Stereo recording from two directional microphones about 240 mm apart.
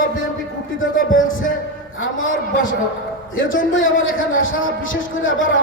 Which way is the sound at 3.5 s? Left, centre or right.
Left.